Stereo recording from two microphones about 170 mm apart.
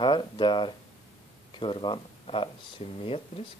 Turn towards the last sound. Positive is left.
turn(degrees=35)  # may be behind; listen again after turning